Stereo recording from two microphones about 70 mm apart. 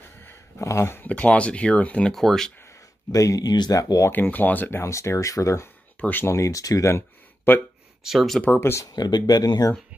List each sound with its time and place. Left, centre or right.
0.6 s speech: left
1.0 s speech: left
2.1 s speech: centre
3.1 s speech: left
3.7 s speech: left
4.1 s speech: left
4.8 s speech: left
5.9 s speech: left
6.2 s speech: left
6.9 s a sound: left
8.0 s speech: centre
8.5 s speech: left
8.9 s speech: left